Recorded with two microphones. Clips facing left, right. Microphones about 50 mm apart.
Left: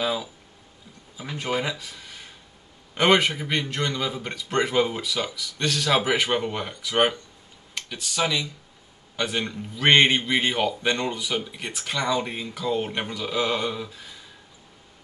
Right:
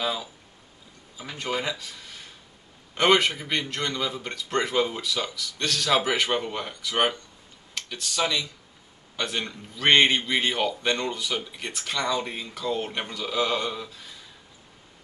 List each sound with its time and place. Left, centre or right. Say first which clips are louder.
0.0 s a man's voice: left 3 dB; centre